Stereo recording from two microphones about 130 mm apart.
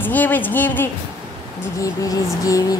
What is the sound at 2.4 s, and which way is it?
Music, 25° left (ahead or behind).